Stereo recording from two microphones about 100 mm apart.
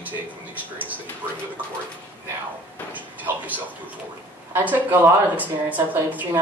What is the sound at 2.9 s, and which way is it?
Speech, 15° right (ahead or behind).